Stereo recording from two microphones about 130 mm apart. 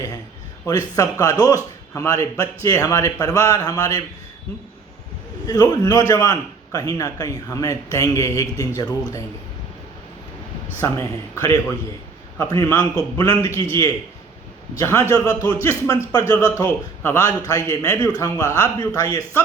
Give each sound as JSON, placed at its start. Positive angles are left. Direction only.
{"t": 0.6, "sound": "a man's voice", "side_deg": 25}
{"t": 5.5, "sound": "a man's voice", "side_deg": 30}
{"t": 10.8, "sound": "a man's voice", "side_deg": 20}
{"t": 17.0, "sound": "a man's voice", "side_deg": 15}